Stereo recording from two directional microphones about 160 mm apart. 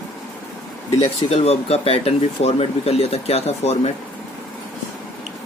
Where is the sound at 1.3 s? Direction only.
40° left (ahead or behind).